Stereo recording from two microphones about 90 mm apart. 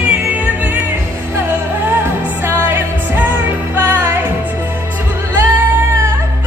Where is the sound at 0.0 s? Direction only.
15° right (ahead or behind).